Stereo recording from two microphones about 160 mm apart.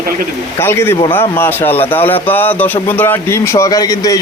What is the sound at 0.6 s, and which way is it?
Speech, 15° left (ahead or behind).